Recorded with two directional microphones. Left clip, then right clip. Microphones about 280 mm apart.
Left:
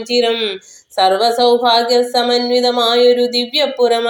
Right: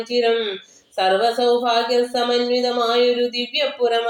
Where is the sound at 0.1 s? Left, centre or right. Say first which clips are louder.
Left 4 dB; left.